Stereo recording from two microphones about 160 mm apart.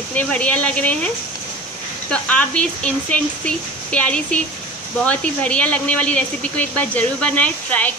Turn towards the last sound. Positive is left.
turn(degrees=10)  # may be behind; listen again after turning